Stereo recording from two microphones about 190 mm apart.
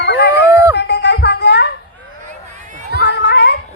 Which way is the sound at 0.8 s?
60° left (ahead or behind).